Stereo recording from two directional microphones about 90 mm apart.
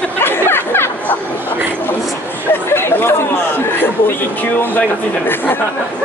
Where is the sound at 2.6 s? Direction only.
25° left (ahead or behind).